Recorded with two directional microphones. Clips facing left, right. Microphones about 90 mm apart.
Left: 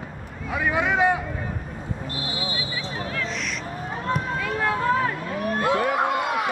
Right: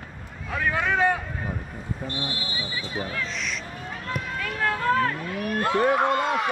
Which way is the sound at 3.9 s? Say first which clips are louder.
Left 6 dB; 35° left (ahead or behind).